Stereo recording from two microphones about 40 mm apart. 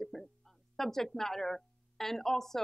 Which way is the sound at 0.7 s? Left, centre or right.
Centre.